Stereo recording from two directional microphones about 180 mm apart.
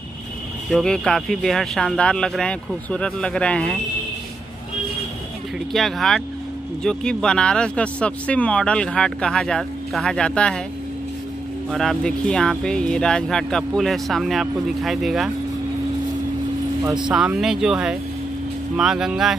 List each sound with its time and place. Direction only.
0.7 s speech: centre (ahead or behind)
5.7 s speech: centre (ahead or behind)
11.7 s speech: centre (ahead or behind)
16.8 s speech: 25° right (ahead or behind)
17.1 s speech: 5° right (ahead or behind)